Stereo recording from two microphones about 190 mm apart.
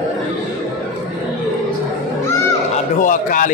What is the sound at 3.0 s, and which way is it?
Speech, 45° left (ahead or behind).